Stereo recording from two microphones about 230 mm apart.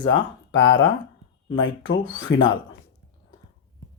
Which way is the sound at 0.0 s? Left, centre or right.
Left.